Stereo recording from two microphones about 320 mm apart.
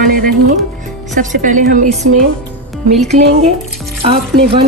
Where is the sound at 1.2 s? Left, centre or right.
Right.